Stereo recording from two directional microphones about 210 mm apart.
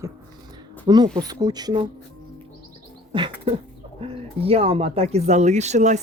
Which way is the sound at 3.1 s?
25° right (ahead or behind).